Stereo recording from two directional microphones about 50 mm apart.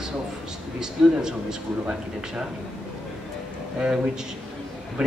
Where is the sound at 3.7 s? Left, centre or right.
Centre.